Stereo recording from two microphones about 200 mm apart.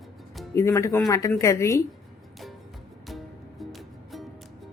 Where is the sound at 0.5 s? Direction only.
15° left (ahead or behind).